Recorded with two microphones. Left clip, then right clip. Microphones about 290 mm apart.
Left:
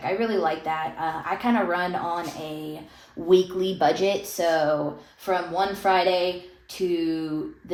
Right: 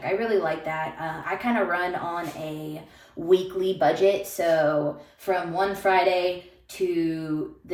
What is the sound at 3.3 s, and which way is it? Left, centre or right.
Speech, left.